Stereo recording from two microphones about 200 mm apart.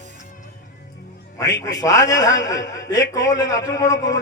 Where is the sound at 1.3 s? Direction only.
15° left (ahead or behind).